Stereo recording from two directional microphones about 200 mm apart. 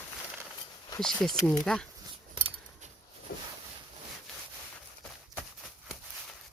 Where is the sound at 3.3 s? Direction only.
45° left (ahead or behind).